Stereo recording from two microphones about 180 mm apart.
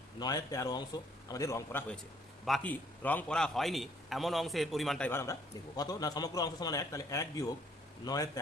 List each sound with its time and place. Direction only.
0.2 s a man's voice: 20° left (ahead or behind)
2.4 s a man's voice: 5° left (ahead or behind); by 8.3 s 20° left (ahead or behind)